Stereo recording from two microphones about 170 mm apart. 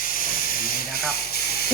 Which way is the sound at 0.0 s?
55° left (ahead or behind).